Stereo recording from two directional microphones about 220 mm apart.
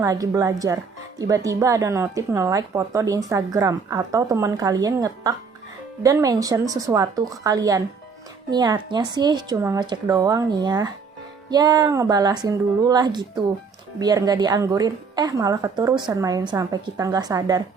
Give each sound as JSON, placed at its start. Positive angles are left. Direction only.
{"t": 0.0, "sound": "speech", "side_deg": -15}